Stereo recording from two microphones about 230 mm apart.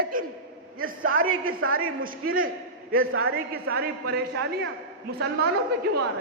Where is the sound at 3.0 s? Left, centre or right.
Right.